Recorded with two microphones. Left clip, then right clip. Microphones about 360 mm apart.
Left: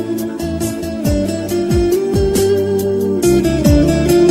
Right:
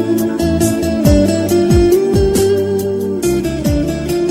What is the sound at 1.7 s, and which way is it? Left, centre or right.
Music, right.